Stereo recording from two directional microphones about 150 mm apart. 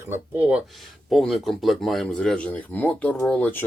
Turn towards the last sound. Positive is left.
turn(degrees=10)  # may be behind; listen again after turning